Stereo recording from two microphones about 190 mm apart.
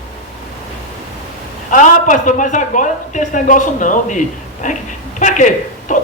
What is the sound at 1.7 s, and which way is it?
A woman's voice, 40° left (ahead or behind).